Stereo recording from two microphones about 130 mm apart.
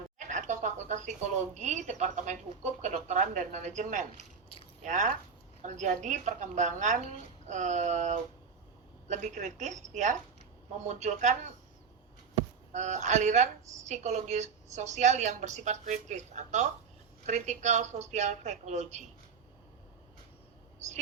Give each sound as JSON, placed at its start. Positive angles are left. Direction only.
{"t": 0.3, "sound": "a sound", "side_deg": -70}
{"t": 1.5, "sound": "a woman's voice", "side_deg": -65}
{"t": 12.7, "sound": "a woman's voice", "side_deg": -65}